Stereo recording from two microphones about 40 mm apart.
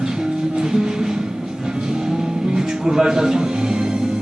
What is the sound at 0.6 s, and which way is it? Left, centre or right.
Music, centre.